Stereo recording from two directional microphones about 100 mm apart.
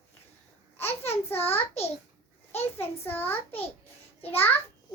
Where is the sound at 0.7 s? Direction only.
25° left (ahead or behind).